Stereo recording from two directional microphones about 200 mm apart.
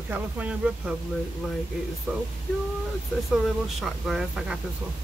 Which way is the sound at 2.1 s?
Centre (ahead or behind).